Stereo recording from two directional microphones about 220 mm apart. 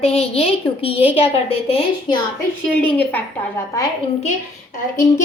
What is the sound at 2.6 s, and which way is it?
Speech, 5° left (ahead or behind).